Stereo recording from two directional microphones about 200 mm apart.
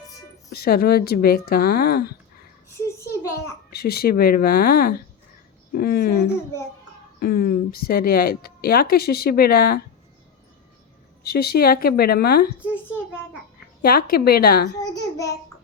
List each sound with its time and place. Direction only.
0.5 s a woman's voice: 50° left (ahead or behind)
2.7 s a sound: 15° left (ahead or behind)
3.7 s a woman's voice: 50° left (ahead or behind)
11.2 s a woman's voice: 50° left (ahead or behind)
13.8 s a woman's voice: 50° left (ahead or behind)
14.8 s a child's voice: 20° left (ahead or behind)